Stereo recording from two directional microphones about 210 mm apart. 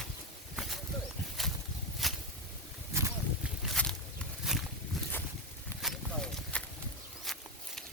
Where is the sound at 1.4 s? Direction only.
Centre (ahead or behind).